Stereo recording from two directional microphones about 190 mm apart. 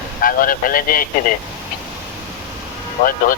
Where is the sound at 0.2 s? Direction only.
50° left (ahead or behind).